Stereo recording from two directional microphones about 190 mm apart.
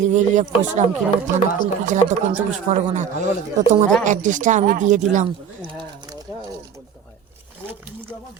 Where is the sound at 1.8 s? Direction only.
40° right (ahead or behind).